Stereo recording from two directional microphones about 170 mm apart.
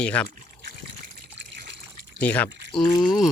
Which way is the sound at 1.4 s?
90° right.